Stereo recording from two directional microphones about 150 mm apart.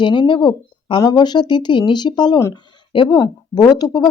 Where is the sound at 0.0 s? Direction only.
30° left (ahead or behind).